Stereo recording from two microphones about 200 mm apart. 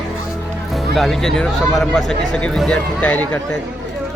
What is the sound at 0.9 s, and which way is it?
Speech, centre (ahead or behind).